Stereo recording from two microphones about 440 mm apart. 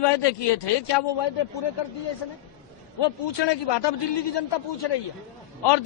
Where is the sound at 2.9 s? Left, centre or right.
Left.